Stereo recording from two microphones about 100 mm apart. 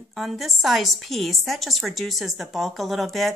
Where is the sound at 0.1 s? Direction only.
Centre (ahead or behind).